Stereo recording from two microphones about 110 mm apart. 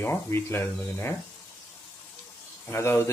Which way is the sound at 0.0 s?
20° left (ahead or behind).